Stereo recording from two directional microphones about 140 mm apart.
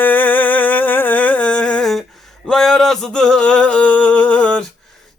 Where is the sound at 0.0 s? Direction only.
15° left (ahead or behind).